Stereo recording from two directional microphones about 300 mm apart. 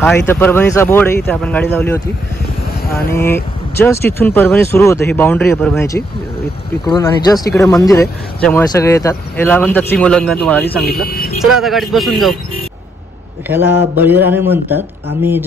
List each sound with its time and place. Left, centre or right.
0.0 s speech: centre
3.2 s speech: centre
11.1 s vehicle: left
11.5 s a man's voice: centre
13.5 s speech: centre